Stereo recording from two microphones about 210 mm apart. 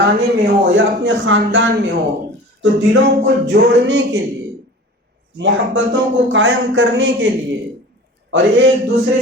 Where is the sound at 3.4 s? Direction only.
55° right (ahead or behind).